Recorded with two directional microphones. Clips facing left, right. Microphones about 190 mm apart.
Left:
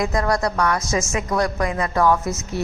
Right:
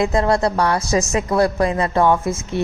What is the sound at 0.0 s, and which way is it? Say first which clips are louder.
A woman's voice: right 4 dB; 25° right (ahead or behind).